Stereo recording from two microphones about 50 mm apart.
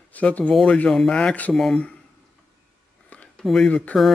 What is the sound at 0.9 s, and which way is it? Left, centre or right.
Speech, centre.